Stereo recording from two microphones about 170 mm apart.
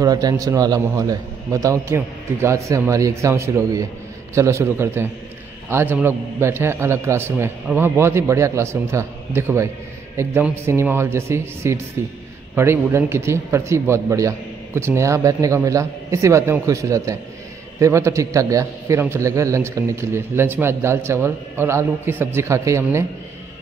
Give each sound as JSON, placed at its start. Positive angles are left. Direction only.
{"t": 0.0, "sound": "a man's voice", "side_deg": -20}